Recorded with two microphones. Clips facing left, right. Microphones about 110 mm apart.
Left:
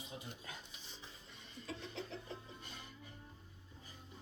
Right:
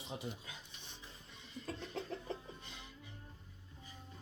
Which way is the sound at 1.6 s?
50° right (ahead or behind).